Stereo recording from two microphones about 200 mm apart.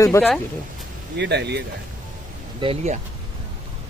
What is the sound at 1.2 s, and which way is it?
Speech, 60° right (ahead or behind).